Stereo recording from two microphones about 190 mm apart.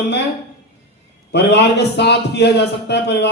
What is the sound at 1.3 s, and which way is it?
A man's voice, 65° left (ahead or behind).